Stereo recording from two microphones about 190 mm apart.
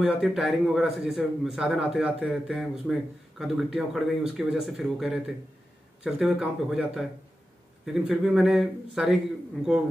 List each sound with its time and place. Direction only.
0.0 s a man's voice: centre (ahead or behind)